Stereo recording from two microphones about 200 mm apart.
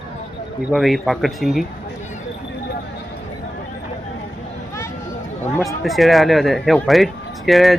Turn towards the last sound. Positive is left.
turn(degrees=0)  # may be behind; listen again after turning